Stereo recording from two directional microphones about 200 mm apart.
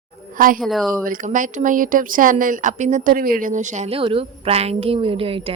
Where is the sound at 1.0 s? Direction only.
40° right (ahead or behind).